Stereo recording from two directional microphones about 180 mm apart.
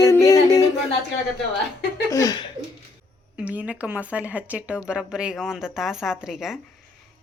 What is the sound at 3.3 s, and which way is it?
A woman's voice, 10° right (ahead or behind).